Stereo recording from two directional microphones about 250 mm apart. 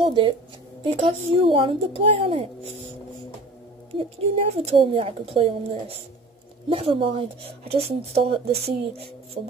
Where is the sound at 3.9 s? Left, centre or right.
Right.